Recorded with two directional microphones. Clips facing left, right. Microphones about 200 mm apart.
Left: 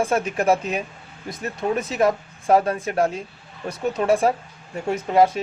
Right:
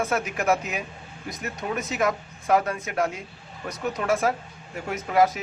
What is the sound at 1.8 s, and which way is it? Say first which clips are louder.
Speech: left 3 dB; 30° left (ahead or behind).